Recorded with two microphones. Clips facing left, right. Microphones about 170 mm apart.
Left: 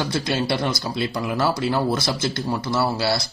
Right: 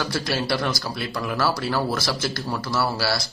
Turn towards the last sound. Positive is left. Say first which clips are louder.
# left 2 dB
turn(degrees=20)  # may be behind; listen again after turning